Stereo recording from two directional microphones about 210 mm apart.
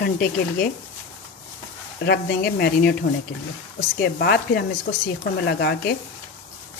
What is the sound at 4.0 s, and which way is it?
Speech, 50° left (ahead or behind).